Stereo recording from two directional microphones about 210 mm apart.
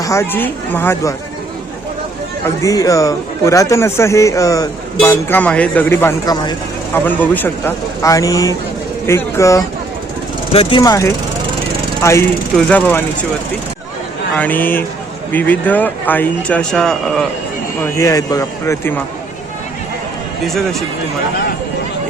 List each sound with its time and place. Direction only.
0.0 s speech: 15° left (ahead or behind)
2.6 s speech: 15° left (ahead or behind)
6.9 s speech: 10° left (ahead or behind)
10.5 s speech: 25° left (ahead or behind); by 13.0 s 10° left (ahead or behind)
14.3 s speech: 10° left (ahead or behind)
17.7 s speech: 15° left (ahead or behind)
20.4 s speech: centre (ahead or behind)